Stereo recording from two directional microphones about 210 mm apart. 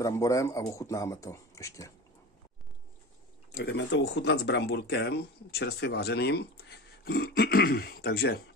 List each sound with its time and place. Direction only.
0.0 s speech: 15° left (ahead or behind)
3.5 s speech: 50° left (ahead or behind)